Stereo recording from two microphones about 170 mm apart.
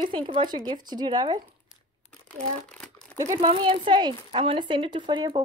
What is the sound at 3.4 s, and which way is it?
Speech, 30° right (ahead or behind).